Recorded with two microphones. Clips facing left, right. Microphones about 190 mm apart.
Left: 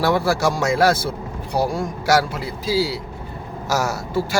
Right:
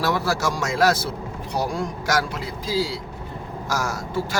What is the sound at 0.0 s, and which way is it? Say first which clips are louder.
Speech: left 4 dB; 60° left (ahead or behind).